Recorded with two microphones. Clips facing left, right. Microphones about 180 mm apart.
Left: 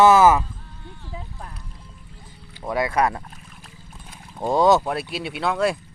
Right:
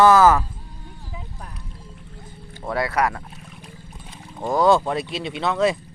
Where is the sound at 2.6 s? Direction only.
20° left (ahead or behind).